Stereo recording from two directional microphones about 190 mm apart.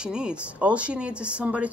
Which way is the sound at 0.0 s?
5° right (ahead or behind).